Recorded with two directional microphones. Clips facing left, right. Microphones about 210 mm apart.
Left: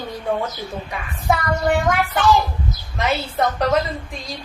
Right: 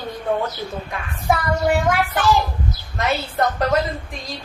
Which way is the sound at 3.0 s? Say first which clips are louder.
Even; centre (ahead or behind).